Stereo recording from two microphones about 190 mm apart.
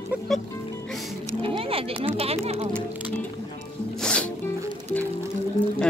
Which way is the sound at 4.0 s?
5° left (ahead or behind).